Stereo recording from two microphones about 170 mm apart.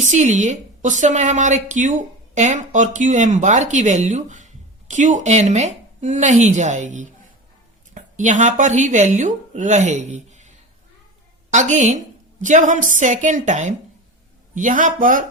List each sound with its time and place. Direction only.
0.0 s a woman's voice: 45° right (ahead or behind)
11.5 s a woman's voice: 45° right (ahead or behind)